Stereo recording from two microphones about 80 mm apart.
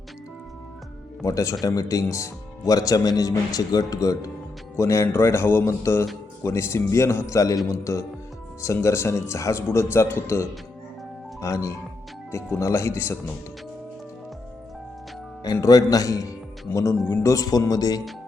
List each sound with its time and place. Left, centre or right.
1.2 s speech: left
15.6 s speech: left
16.7 s speech: left
17.2 s speech: left